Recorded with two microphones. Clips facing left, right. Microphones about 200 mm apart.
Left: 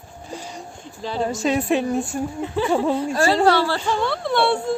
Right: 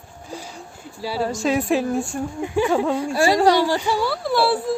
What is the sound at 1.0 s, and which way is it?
A woman's voice, 10° right (ahead or behind).